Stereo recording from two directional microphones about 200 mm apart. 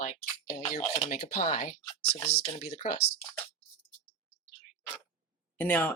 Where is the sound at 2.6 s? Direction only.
30° left (ahead or behind).